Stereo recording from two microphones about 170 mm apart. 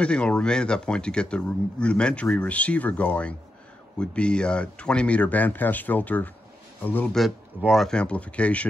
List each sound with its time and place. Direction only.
0.0 s speech: 5° left (ahead or behind)
7.2 s speech: centre (ahead or behind)